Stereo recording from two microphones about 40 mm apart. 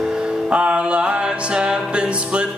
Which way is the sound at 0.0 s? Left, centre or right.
Centre.